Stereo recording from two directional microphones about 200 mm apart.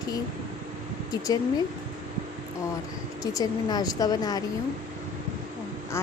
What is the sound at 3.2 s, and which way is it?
Speech, 20° left (ahead or behind).